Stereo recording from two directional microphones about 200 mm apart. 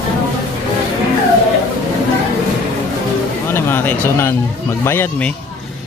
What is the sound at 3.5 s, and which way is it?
Music, 10° left (ahead or behind).